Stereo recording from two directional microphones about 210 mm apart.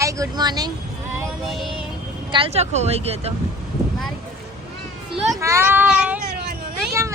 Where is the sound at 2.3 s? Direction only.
25° right (ahead or behind).